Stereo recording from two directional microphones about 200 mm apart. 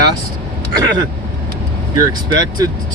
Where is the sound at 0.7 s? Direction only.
20° right (ahead or behind).